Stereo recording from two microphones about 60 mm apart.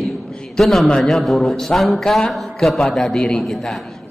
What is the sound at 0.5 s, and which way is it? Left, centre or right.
A man's voice, centre.